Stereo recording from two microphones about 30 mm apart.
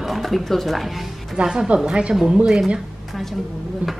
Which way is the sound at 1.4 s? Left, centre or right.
Right.